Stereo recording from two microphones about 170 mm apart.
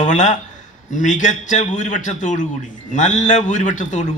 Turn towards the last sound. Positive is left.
turn(degrees=45)  # may be behind; listen again after turning